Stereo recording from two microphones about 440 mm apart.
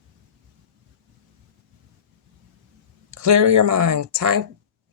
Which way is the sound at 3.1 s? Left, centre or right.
Right.